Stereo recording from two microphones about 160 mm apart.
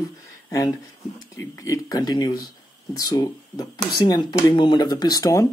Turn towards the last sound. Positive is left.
turn(degrees=20)  # may be behind; listen again after turning